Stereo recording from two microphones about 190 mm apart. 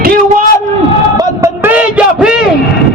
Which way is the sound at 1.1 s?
15° right (ahead or behind).